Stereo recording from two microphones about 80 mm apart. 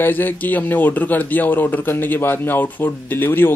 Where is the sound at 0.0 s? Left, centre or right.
Left.